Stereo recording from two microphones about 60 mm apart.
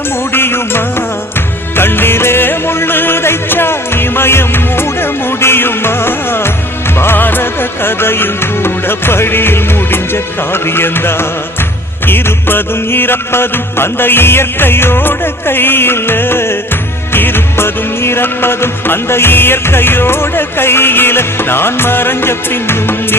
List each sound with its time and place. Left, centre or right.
0.3 s music: left